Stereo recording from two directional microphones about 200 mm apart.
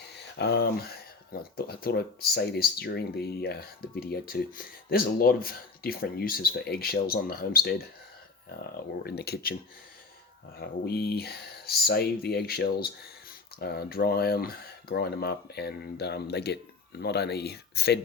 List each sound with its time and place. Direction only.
0.1 s speech: 55° left (ahead or behind)
9.0 s speech: 55° left (ahead or behind)
10.6 s speech: 55° left (ahead or behind)